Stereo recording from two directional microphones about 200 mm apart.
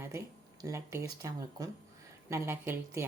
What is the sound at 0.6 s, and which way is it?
Speech, 15° right (ahead or behind).